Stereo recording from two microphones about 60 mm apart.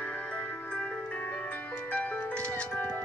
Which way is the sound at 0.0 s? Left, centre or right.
Left.